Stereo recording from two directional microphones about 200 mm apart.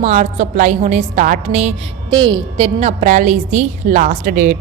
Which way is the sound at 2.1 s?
25° right (ahead or behind).